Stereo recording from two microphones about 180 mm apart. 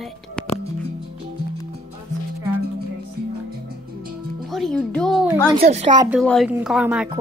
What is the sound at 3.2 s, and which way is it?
Music, 60° right (ahead or behind).